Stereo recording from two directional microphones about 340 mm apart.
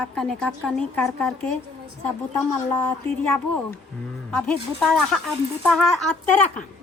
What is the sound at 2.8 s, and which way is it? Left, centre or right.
A woman's voice, centre.